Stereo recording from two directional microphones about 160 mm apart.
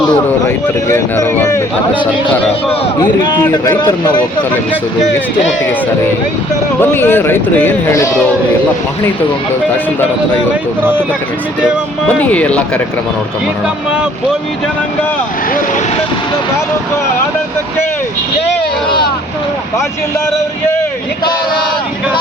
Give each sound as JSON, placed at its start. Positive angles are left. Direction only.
{"t": 0.9, "sound": "a sound", "side_deg": 15}
{"t": 3.0, "sound": "speech", "side_deg": 25}
{"t": 6.9, "sound": "speech", "side_deg": 15}
{"t": 12.0, "sound": "speech", "side_deg": 10}